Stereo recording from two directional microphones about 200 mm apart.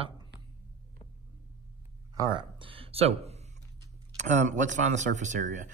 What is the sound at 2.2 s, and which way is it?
Speech, 25° right (ahead or behind).